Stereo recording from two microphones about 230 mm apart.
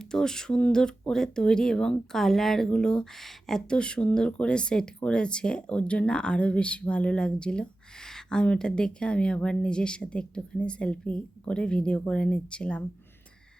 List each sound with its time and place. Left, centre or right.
0.0 s speech: centre